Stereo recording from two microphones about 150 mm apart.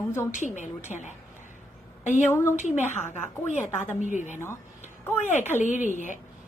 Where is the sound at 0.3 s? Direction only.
55° left (ahead or behind).